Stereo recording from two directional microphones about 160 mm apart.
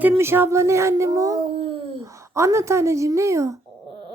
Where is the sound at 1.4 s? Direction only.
35° right (ahead or behind).